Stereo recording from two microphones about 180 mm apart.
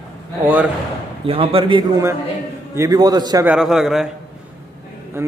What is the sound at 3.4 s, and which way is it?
Speech, 5° right (ahead or behind).